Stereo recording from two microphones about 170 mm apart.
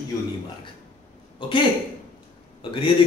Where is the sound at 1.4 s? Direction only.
30° left (ahead or behind).